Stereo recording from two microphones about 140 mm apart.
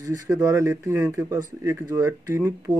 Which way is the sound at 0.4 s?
25° right (ahead or behind).